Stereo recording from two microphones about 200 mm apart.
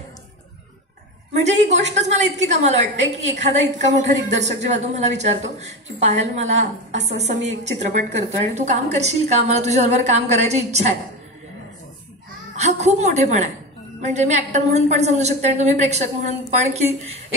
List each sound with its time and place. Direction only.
1.4 s a woman's voice: 35° right (ahead or behind)
12.5 s a woman's voice: 35° right (ahead or behind)